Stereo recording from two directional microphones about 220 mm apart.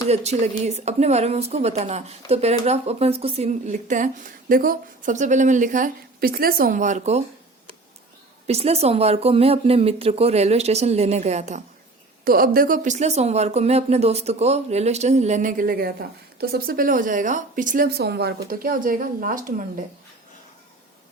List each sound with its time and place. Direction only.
0.1 s a woman's voice: 30° right (ahead or behind)
8.4 s speech: 30° right (ahead or behind)
12.2 s a woman's voice: 40° right (ahead or behind)